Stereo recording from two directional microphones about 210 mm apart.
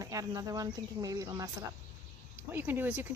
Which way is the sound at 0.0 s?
15° right (ahead or behind).